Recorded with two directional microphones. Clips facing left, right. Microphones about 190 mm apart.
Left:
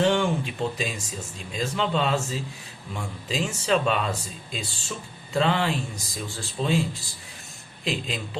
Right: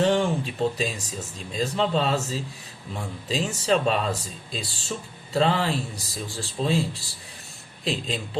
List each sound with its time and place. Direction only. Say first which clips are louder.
0.0 s speech: right 1 dB; 35° right (ahead or behind)